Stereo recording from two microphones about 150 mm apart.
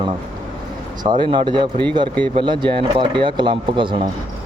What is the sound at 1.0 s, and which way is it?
Speech, 30° right (ahead or behind).